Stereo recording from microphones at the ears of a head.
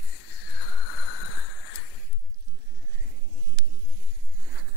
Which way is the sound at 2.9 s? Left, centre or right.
Right.